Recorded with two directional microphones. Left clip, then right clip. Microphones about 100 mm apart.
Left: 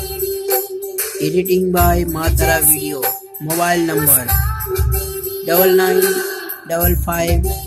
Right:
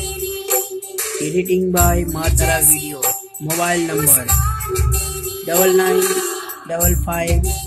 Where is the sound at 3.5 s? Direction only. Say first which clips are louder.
Left 2 dB; 15° left (ahead or behind).